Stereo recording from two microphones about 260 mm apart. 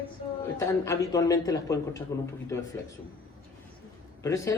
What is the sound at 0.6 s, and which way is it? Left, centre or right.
A man's voice, centre.